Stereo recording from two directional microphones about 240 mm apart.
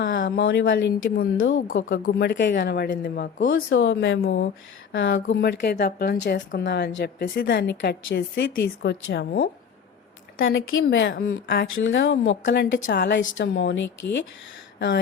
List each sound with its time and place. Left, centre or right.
0.0 s a woman's voice: left
1.6 s a woman's voice: left